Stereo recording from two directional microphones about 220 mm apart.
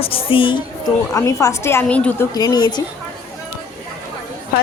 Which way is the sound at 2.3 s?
15° left (ahead or behind).